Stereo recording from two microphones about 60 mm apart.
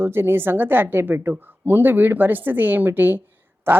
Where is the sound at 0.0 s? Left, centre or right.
Right.